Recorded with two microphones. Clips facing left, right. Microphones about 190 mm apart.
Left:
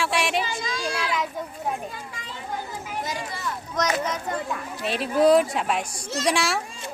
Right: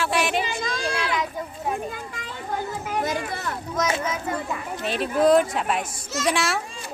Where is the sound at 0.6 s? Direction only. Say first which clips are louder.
Right 2 dB; 55° right (ahead or behind).